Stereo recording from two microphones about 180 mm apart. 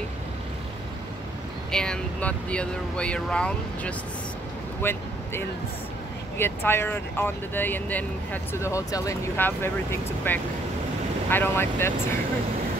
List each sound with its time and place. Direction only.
1.7 s speech: 5° left (ahead or behind)